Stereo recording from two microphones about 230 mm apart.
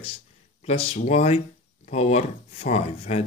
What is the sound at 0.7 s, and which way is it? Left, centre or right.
Speech, left.